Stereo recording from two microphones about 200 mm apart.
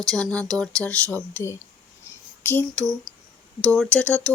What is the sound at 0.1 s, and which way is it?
Speech, 5° left (ahead or behind).